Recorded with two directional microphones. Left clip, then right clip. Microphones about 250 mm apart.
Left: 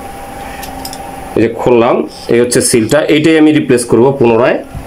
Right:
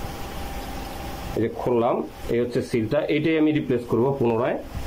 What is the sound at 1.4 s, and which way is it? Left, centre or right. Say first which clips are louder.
Speech: left 13 dB; left.